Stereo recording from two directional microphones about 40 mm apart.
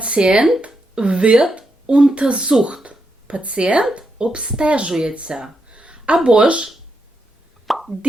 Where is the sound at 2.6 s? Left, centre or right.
Right.